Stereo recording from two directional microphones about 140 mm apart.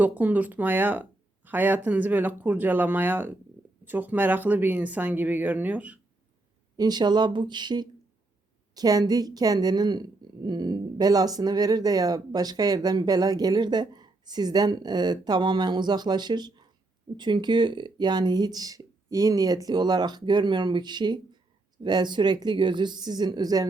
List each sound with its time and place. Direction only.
0.0 s speech: 10° right (ahead or behind)
6.7 s speech: 30° right (ahead or behind)